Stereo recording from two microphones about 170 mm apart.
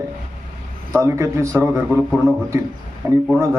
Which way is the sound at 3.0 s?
15° right (ahead or behind).